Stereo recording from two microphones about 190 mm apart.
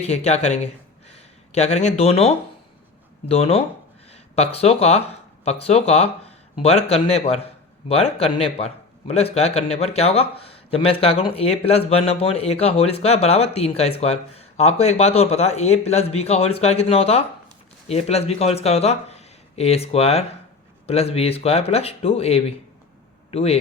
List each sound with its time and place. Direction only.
0.0 s speech: 35° left (ahead or behind)